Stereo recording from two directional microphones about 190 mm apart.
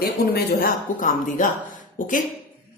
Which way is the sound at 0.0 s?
50° left (ahead or behind).